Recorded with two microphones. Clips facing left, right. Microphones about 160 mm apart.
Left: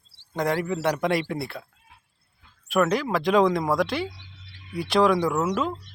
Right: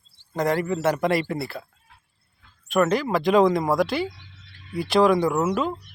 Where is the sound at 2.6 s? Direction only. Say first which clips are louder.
Right 1 dB; centre (ahead or behind).